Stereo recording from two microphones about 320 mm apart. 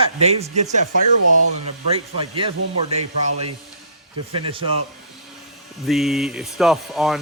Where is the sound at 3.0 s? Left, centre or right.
Right.